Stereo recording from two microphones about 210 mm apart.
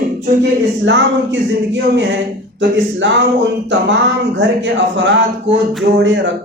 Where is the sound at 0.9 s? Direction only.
60° right (ahead or behind).